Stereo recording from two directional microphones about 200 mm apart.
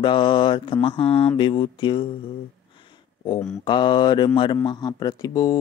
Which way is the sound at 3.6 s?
25° left (ahead or behind).